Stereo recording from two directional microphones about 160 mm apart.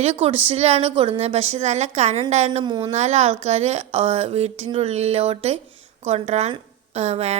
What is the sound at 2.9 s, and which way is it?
A woman's voice, 45° right (ahead or behind).